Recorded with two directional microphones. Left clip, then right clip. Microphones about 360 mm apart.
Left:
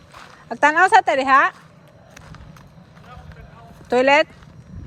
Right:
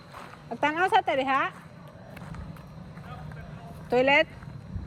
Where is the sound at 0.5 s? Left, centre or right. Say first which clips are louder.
Left 10 dB; centre.